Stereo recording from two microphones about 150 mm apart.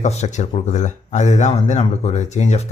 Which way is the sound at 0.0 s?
50° left (ahead or behind).